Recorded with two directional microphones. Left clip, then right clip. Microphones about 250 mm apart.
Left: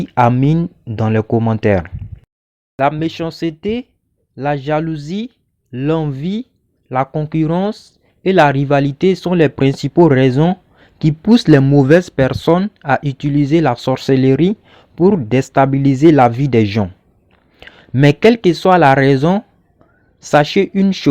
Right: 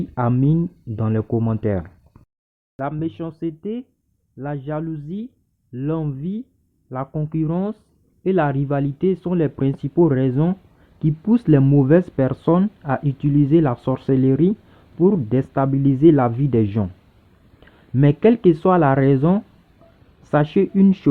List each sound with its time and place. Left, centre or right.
0.1 s speech: left